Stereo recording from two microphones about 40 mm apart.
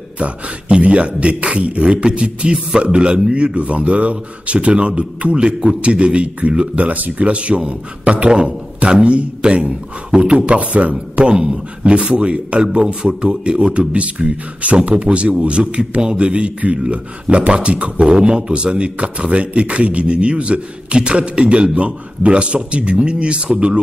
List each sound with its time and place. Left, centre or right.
0.2 s a man's voice: right